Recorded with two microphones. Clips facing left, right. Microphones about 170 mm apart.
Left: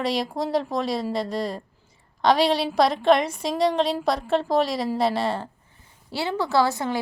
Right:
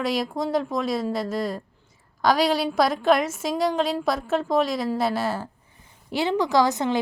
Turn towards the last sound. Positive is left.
turn(degrees=-20)  # may be behind; listen again after turning